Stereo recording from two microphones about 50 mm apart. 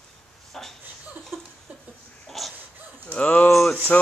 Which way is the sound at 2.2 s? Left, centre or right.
Centre.